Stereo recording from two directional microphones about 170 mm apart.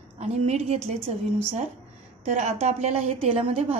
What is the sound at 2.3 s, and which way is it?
A woman's voice, 45° right (ahead or behind).